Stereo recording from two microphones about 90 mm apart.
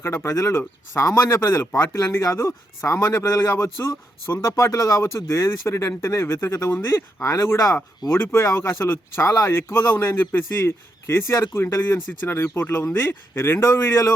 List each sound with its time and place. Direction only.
0.0 s speech: 25° left (ahead or behind)